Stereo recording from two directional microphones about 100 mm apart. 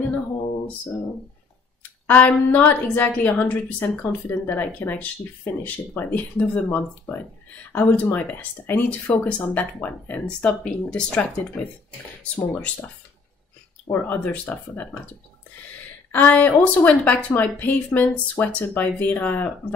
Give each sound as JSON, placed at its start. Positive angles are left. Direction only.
{"t": 1.8, "sound": "a woman's voice", "side_deg": 15}
{"t": 14.0, "sound": "a woman's voice", "side_deg": 15}
{"t": 16.1, "sound": "a woman's voice", "side_deg": 15}